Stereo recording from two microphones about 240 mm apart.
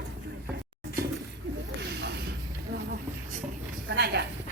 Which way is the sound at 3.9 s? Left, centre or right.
Right.